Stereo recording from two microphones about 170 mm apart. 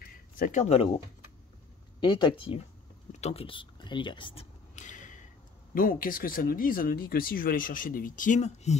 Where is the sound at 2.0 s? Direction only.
25° left (ahead or behind).